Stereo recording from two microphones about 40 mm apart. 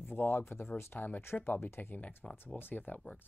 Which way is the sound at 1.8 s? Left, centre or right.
Left.